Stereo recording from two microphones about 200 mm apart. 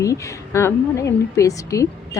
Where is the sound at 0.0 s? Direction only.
15° left (ahead or behind).